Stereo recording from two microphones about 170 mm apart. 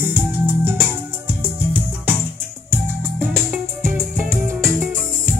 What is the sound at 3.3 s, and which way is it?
Music, centre (ahead or behind).